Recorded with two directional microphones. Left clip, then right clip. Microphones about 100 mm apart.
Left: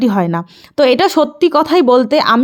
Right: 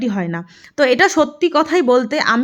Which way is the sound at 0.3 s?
35° left (ahead or behind).